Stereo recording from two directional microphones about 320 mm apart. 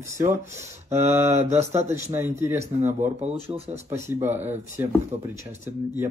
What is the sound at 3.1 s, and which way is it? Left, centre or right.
Speech, centre.